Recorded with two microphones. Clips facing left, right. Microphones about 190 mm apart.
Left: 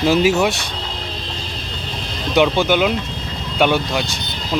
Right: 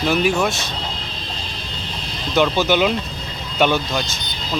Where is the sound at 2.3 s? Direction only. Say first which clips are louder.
Left 2 dB; 15° left (ahead or behind).